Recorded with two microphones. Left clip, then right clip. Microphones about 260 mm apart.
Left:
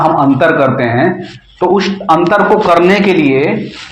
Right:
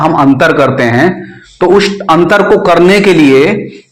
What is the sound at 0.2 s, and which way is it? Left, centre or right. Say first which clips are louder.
A man's voice: right 2 dB; right.